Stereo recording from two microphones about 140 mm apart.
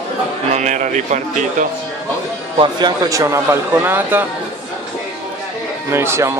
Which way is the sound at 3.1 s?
20° right (ahead or behind).